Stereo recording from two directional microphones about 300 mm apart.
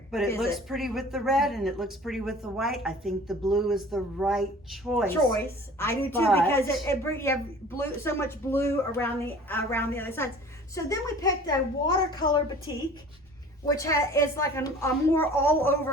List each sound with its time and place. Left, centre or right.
0.1 s a woman's voice: centre